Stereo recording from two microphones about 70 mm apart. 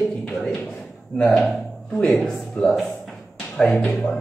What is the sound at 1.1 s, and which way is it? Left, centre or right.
A woman's voice, left.